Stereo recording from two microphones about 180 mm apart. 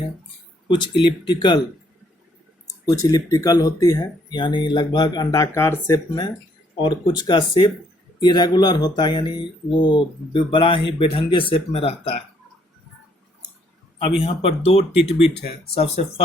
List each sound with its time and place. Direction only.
0.7 s speech: 25° left (ahead or behind)
2.6 s speech: 20° left (ahead or behind)
14.2 s speech: 35° left (ahead or behind)